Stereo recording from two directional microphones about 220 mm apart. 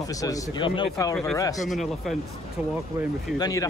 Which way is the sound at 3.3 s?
15° left (ahead or behind).